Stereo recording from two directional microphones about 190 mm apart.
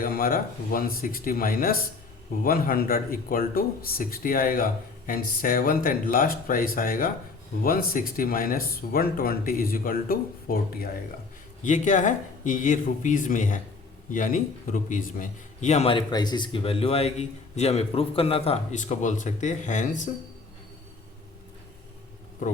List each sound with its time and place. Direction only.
0.0 s speech: 50° left (ahead or behind)
11.6 s a man's voice: 40° left (ahead or behind)